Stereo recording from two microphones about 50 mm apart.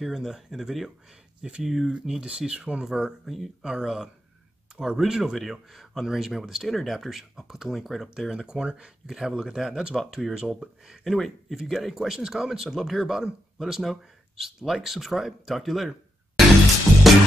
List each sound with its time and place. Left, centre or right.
0.0 s speech: centre